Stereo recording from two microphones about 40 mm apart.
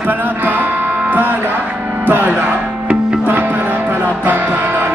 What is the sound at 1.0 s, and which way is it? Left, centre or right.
Speech, right.